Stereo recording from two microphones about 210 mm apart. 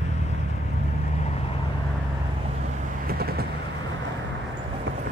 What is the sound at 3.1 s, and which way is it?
Vehicle, 45° right (ahead or behind).